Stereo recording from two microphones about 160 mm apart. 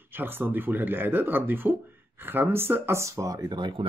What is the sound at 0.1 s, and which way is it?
Speech, 15° right (ahead or behind).